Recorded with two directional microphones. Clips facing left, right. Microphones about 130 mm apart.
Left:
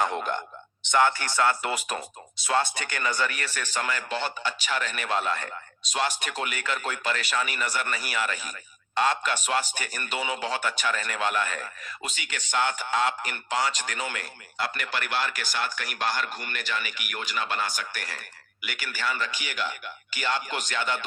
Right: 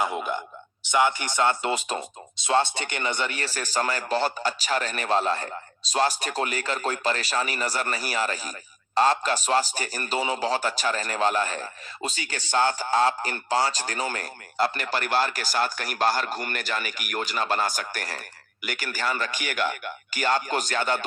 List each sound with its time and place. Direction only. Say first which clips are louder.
0.0 s a man's voice: even; 5° right (ahead or behind); by 21.0 s 40° right (ahead or behind)